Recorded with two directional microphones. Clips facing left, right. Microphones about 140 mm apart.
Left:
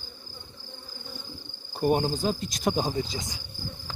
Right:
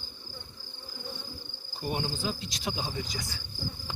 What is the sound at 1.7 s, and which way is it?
Insect, 50° left (ahead or behind).